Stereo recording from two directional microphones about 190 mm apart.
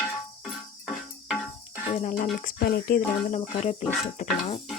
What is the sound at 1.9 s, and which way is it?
Speech, 35° left (ahead or behind).